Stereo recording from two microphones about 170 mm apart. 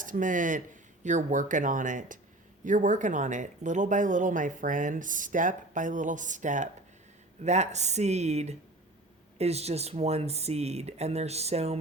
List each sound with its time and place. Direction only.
0.0 s speech: 50° right (ahead or behind)